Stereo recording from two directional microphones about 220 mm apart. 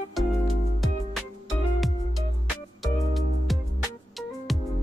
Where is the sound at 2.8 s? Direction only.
Centre (ahead or behind).